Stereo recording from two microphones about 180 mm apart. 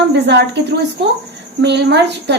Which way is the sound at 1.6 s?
70° right (ahead or behind).